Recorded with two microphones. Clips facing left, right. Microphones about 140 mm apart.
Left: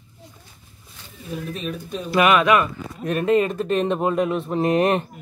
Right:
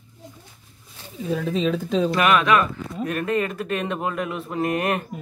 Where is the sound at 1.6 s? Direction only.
90° right.